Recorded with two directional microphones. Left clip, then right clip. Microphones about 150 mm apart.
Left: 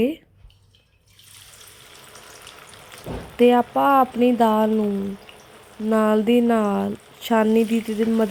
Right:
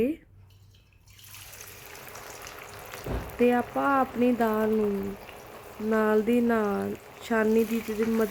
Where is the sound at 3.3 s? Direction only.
15° left (ahead or behind).